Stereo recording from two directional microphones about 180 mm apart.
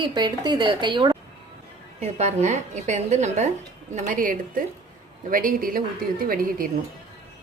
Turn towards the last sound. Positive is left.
turn(degrees=-55)  # may be behind; listen again after turning